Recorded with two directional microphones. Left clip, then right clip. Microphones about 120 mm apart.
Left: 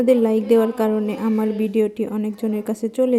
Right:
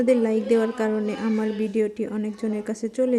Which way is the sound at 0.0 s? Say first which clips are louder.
Left 4 dB; 20° left (ahead or behind).